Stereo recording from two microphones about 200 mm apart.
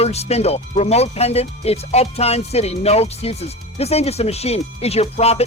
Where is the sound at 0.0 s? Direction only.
30° left (ahead or behind).